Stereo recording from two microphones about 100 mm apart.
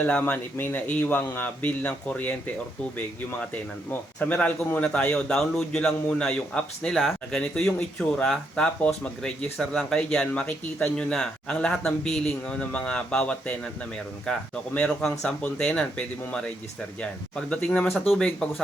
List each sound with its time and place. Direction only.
0.0 s a man's voice: 15° left (ahead or behind)
4.2 s a man's voice: 15° left (ahead or behind)
17.9 s speech: centre (ahead or behind)